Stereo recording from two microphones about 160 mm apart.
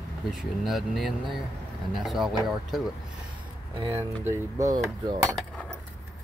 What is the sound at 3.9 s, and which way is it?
Speech, 15° right (ahead or behind).